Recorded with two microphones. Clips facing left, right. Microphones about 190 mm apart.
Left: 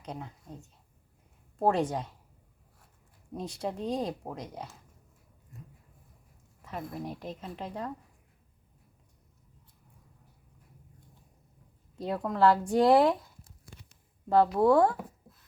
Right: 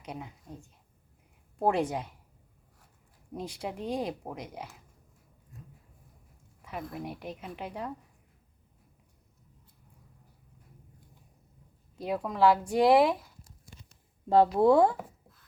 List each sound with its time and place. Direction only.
0.0 s speech: 10° right (ahead or behind)
1.6 s speech: 15° right (ahead or behind)
3.3 s speech: 10° right (ahead or behind)
6.7 s speech: 10° right (ahead or behind)
11.9 s speech: 5° right (ahead or behind)
14.3 s speech: 20° right (ahead or behind)